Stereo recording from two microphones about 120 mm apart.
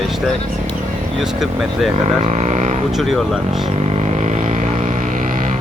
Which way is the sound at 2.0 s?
75° right (ahead or behind).